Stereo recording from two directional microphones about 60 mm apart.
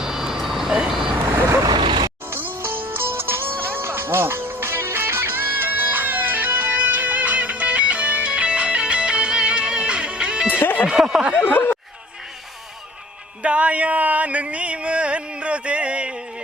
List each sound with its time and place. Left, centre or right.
0.0 s vehicle: centre
1.1 s vehicle: right
2.3 s music: right; by 10.5 s centre
10.5 s a sound: left
10.8 s a sound: centre
11.4 s chatter: left
13.4 s music: right